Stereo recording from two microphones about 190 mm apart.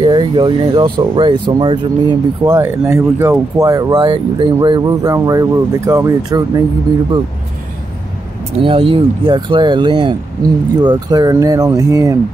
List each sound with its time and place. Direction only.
0.0 s speech: 25° right (ahead or behind)
2.4 s speech: 15° right (ahead or behind)
3.3 s speech: 20° right (ahead or behind)
8.6 s speech: 30° right (ahead or behind)